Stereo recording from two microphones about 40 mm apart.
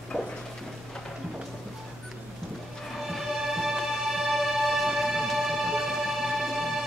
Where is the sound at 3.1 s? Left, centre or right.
Centre.